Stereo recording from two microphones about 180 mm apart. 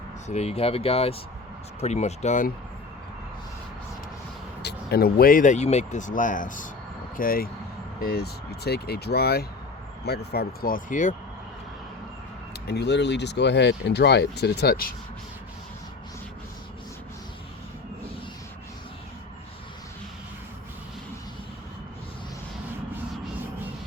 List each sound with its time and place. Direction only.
0.3 s speech: 35° left (ahead or behind)
4.6 s speech: 60° left (ahead or behind); by 11.1 s 45° left (ahead or behind)
12.6 s speech: 65° left (ahead or behind)